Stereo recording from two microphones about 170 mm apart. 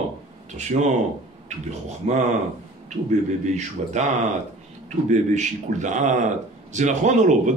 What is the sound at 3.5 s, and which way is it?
Speech, 45° right (ahead or behind).